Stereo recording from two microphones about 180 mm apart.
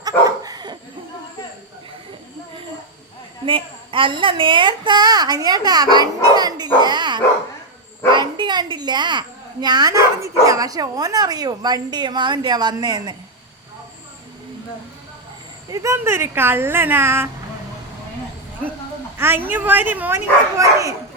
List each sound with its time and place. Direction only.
0.0 s dog: 20° right (ahead or behind)
3.4 s a woman's voice: 30° right (ahead or behind)
6.8 s dog: 25° right (ahead or behind)
8.1 s a child's voice: 25° right (ahead or behind)
15.7 s speech: 15° right (ahead or behind)
19.1 s speech: 10° right (ahead or behind)